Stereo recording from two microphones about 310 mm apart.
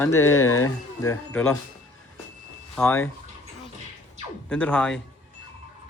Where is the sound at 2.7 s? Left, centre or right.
Centre.